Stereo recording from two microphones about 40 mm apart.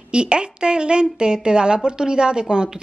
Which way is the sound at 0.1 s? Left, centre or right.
Right.